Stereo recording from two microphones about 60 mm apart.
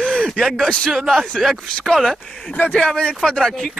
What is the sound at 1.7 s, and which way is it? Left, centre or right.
Speech, centre.